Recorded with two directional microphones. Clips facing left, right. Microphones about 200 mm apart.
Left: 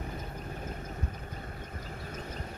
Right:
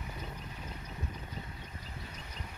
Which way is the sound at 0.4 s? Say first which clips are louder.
Left 6 dB; 50° left (ahead or behind).